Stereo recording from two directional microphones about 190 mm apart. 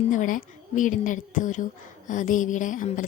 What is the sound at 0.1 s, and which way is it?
A woman's voice, 45° left (ahead or behind).